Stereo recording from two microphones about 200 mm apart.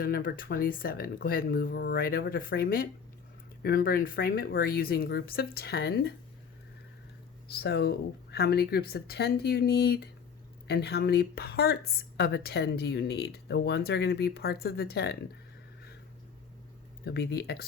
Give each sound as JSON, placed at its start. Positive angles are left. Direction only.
{"t": 0.0, "sound": "speech", "side_deg": 50}
{"t": 7.5, "sound": "speech", "side_deg": 55}
{"t": 17.1, "sound": "speech", "side_deg": 50}